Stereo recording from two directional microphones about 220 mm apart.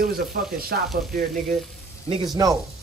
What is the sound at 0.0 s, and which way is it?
Speech, 45° right (ahead or behind).